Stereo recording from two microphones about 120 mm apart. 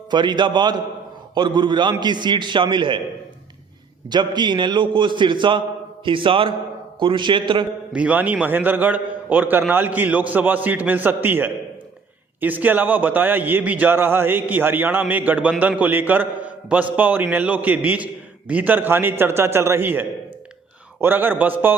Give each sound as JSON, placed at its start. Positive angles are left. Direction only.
{"t": 0.1, "sound": "a man's voice", "side_deg": -40}
{"t": 4.1, "sound": "a man's voice", "side_deg": -40}
{"t": 7.9, "sound": "a man's voice", "side_deg": -10}